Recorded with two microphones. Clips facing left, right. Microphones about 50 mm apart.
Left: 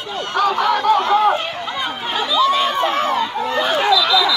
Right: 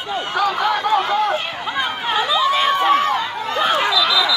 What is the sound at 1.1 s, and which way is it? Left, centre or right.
Speech, centre.